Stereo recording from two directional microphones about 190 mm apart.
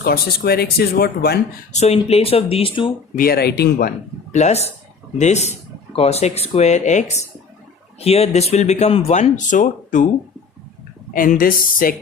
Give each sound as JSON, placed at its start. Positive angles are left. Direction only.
{"t": 0.0, "sound": "speech", "side_deg": 55}
{"t": 1.7, "sound": "speech", "side_deg": 35}
{"t": 3.2, "sound": "speech", "side_deg": 55}
{"t": 4.3, "sound": "speech", "side_deg": 35}
{"t": 11.1, "sound": "speech", "side_deg": 45}